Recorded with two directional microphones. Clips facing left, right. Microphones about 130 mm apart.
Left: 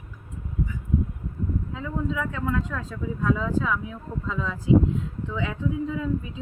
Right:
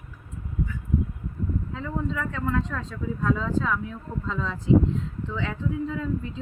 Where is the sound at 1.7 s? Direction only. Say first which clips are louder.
Left 1 dB; 5° left (ahead or behind).